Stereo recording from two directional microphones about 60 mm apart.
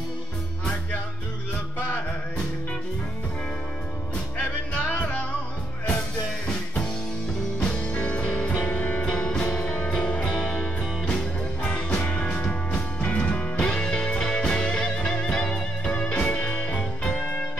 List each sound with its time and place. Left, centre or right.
4.9 s music: left
6.4 s music: centre